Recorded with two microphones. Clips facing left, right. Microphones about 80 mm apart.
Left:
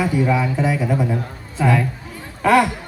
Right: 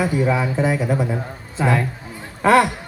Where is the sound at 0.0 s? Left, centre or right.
Centre.